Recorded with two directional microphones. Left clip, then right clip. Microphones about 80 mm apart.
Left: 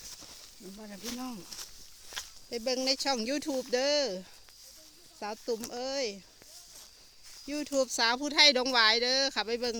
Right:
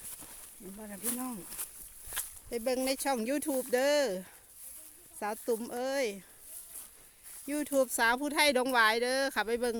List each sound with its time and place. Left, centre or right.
0.8 s speech: centre
2.2 s a sound: centre
2.5 s speech: right
3.7 s speech: right
5.2 s speech: right
7.5 s speech: right